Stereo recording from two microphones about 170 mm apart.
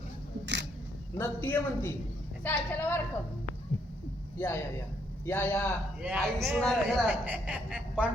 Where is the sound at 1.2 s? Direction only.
10° left (ahead or behind).